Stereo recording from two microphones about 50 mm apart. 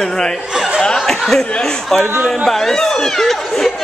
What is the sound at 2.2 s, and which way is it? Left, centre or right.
Speech, centre.